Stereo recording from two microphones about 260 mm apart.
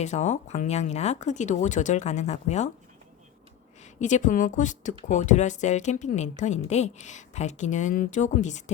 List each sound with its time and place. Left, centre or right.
0.0 s a woman's voice: left
4.0 s a woman's voice: left